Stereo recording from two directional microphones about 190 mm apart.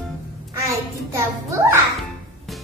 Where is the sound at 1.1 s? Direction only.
15° right (ahead or behind).